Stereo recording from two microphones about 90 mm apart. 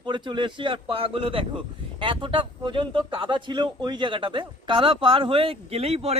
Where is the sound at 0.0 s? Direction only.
60° right (ahead or behind); by 5.5 s 90° right.